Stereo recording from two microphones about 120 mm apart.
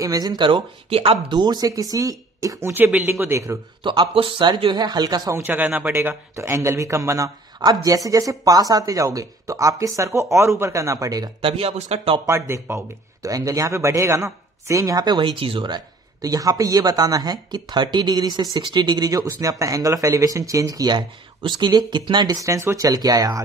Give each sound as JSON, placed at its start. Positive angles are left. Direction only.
{"t": 0.0, "sound": "speech", "side_deg": -30}
{"t": 1.4, "sound": "speech", "side_deg": -35}
{"t": 3.8, "sound": "speech", "side_deg": -40}
{"t": 5.4, "sound": "speech", "side_deg": -15}
{"t": 11.4, "sound": "speech", "side_deg": -55}
{"t": 12.3, "sound": "speech", "side_deg": -25}